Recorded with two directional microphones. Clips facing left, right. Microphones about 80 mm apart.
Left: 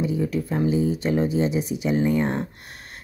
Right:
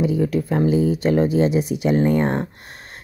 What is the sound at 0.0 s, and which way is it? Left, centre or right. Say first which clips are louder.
Speech: right 4 dB; right.